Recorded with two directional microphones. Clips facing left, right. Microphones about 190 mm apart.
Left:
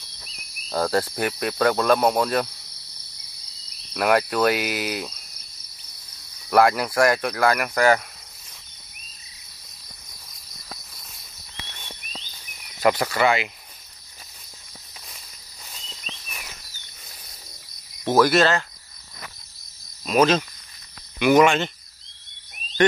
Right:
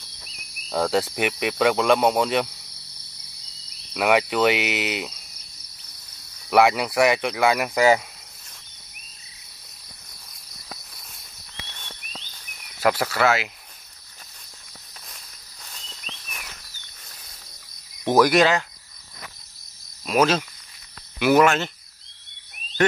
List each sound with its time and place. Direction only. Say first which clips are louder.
0.7 s cricket: even; centre (ahead or behind)
1.7 s speech: even; 10° right (ahead or behind)
2.2 s cricket: even; centre (ahead or behind)
3.9 s cricket: even; 5° right (ahead or behind)
6.5 s cricket: even; 5° right (ahead or behind)
7.5 s speech: right 1 dB; 20° right (ahead or behind)
10.7 s cricket: even; centre (ahead or behind)
11.8 s a sound: left 2 dB; 10° left (ahead or behind)
12.8 s cricket: left 1 dB; 5° right (ahead or behind)
15.6 s insect: left 1 dB; 10° left (ahead or behind)
16.3 s a sound: even; centre (ahead or behind)
18.0 s cricket: right 1 dB; 15° right (ahead or behind)
20.1 s speech: left 1 dB; 5° right (ahead or behind)
21.2 s cricket: left 1 dB; 5° right (ahead or behind)